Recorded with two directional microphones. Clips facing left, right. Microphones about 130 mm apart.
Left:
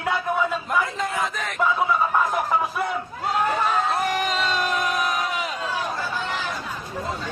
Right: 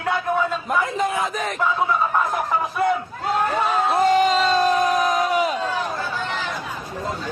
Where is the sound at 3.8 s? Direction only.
30° right (ahead or behind).